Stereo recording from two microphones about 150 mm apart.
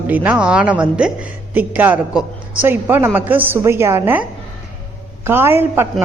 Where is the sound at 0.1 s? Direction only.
10° right (ahead or behind).